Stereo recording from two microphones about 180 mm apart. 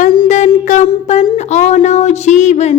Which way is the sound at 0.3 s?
40° left (ahead or behind).